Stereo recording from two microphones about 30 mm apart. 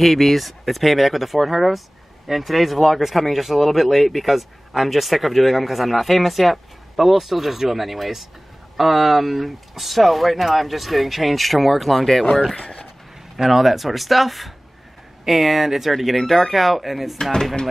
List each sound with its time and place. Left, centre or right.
0.0 s speech: centre
12.5 s speech: left
13.4 s speech: centre
17.2 s speech: left